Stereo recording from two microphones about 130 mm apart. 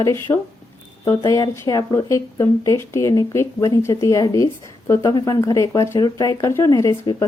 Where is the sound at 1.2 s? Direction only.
30° left (ahead or behind).